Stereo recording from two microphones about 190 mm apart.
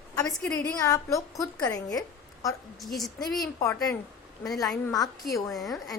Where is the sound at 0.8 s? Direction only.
15° left (ahead or behind).